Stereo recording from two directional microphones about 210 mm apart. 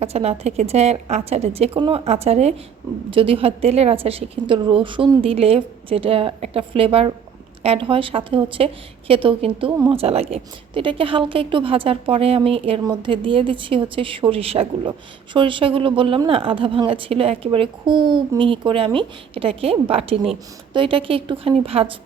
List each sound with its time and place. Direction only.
0.0 s speech: 30° right (ahead or behind)